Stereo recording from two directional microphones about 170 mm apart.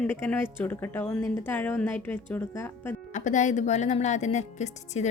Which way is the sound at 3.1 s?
45° left (ahead or behind).